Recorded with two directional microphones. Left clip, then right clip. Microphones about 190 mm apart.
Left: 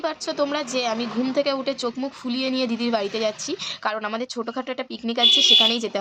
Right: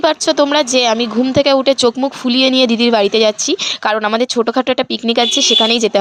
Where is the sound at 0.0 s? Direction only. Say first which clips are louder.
Right 12 dB; 50° right (ahead or behind).